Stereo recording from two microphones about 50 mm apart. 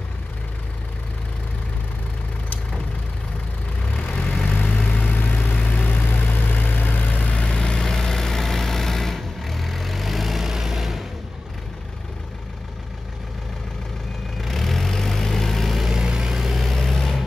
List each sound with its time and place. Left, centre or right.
3.9 s vehicle: left
7.5 s vehicle: centre
14.4 s vehicle: centre
16.6 s vehicle: centre